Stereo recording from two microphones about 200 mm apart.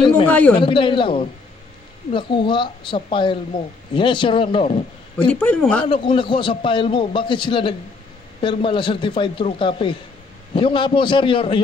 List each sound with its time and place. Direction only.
0.3 s speech: 5° left (ahead or behind)
0.6 s a man's voice: 25° left (ahead or behind)
5.1 s speech: 5° left (ahead or behind)
5.9 s a man's voice: 25° left (ahead or behind)